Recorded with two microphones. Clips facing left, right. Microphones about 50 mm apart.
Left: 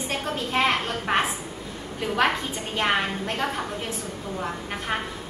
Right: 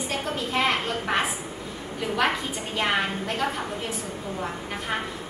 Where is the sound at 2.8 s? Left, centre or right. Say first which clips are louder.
Left 1 dB; left.